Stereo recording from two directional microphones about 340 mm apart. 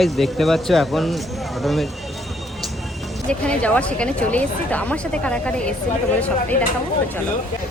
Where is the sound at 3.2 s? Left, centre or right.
Centre.